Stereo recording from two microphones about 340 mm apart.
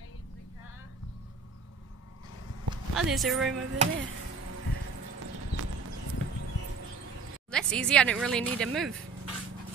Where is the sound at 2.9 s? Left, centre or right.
Centre.